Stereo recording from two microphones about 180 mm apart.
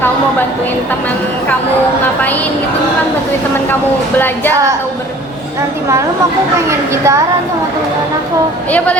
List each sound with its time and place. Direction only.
6.7 s a woman's voice: 15° right (ahead or behind)